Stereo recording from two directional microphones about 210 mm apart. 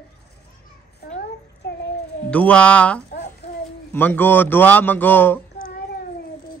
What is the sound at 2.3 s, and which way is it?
Speech, 5° left (ahead or behind).